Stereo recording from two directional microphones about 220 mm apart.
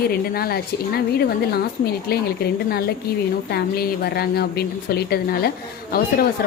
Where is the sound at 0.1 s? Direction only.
45° left (ahead or behind).